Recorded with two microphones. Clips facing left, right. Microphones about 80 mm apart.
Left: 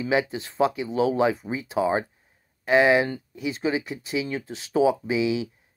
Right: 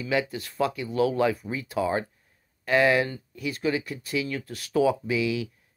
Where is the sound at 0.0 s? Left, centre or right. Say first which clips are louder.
Left 3 dB; left.